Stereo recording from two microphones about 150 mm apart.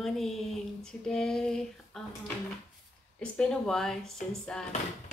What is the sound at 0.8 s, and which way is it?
Speech, 5° left (ahead or behind).